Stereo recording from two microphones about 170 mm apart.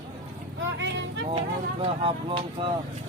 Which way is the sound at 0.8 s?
90° right.